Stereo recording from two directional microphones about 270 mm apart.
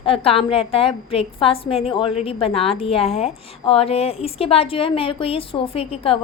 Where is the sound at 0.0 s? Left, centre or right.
Centre.